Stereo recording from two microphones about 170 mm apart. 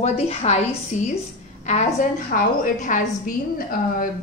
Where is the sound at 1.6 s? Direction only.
40° left (ahead or behind).